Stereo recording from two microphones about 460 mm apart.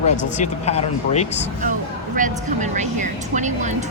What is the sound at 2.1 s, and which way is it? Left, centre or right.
Speech, centre.